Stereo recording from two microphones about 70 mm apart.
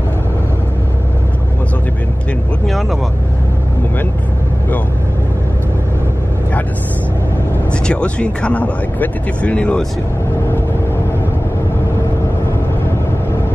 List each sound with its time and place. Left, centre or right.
7.7 s speech: centre